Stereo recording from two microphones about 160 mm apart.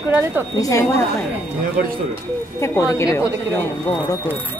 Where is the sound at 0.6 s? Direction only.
20° left (ahead or behind).